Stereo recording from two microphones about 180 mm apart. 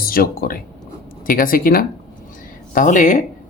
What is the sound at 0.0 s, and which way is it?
Speech, 55° left (ahead or behind).